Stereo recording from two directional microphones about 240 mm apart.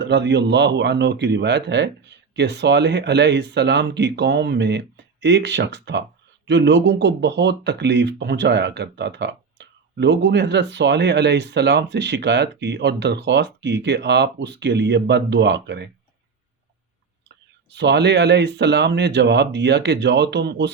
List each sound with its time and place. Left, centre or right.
0.0 s speech: right
17.7 s speech: right